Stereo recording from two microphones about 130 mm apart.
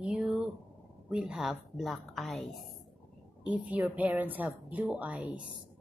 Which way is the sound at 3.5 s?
10° right (ahead or behind).